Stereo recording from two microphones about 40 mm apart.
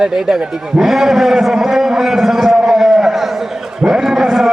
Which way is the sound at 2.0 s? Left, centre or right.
Centre.